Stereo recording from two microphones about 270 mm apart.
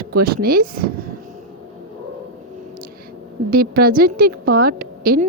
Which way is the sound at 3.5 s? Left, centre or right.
Right.